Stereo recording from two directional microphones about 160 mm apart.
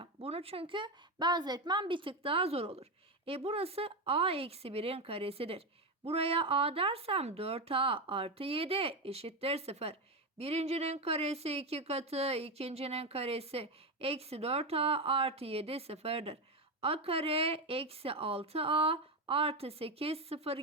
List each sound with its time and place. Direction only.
0.0 s speech: 35° right (ahead or behind)